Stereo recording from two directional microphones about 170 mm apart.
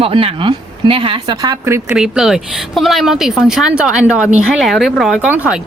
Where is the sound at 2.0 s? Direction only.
5° right (ahead or behind).